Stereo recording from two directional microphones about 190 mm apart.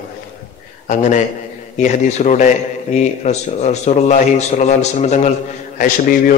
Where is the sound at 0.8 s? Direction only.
40° left (ahead or behind).